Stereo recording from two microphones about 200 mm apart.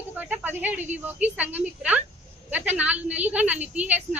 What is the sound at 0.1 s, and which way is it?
A woman's voice, 10° right (ahead or behind).